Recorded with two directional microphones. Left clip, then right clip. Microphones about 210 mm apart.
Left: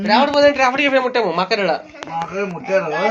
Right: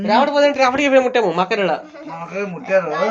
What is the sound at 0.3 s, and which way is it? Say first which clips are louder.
Speech: left 1 dB; 30° right (ahead or behind).